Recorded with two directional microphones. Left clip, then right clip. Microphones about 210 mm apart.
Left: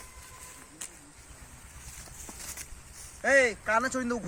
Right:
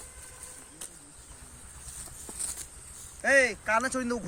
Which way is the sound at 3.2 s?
10° left (ahead or behind).